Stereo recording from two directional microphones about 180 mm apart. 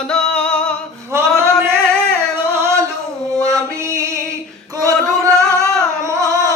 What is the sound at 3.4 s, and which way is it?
Music, 15° right (ahead or behind).